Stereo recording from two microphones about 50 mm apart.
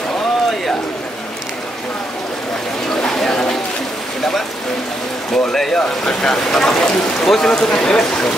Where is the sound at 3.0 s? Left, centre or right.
Centre.